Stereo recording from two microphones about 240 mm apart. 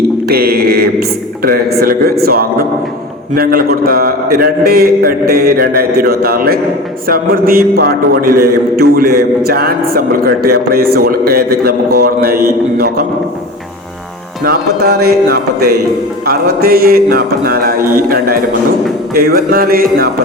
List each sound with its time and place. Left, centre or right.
0.3 s mantra: right
1.5 s a man's voice: right
14.4 s a man's voice: right